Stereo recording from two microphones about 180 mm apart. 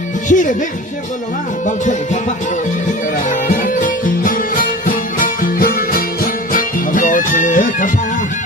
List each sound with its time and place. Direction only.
0.3 s music: 45° left (ahead or behind)
1.6 s music: 45° left (ahead or behind)
3.2 s music: 50° left (ahead or behind)